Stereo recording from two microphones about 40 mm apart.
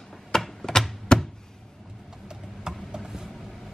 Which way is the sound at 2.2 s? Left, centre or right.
Centre.